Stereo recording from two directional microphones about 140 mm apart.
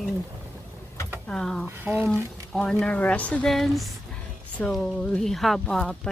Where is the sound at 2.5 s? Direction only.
5° left (ahead or behind).